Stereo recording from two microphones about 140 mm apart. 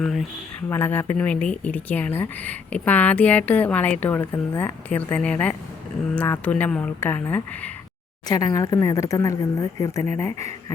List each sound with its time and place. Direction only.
0.0 s speech: centre (ahead or behind)
0.7 s speech: 15° left (ahead or behind)
8.3 s speech: 25° left (ahead or behind)